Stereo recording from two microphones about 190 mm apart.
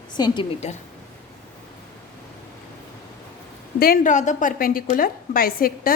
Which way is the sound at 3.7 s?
50° left (ahead or behind).